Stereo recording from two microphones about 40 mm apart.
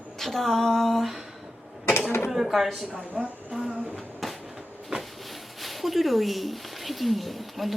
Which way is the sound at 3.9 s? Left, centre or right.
Centre.